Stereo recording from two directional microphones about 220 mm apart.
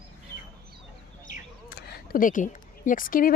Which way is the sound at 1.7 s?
45° left (ahead or behind).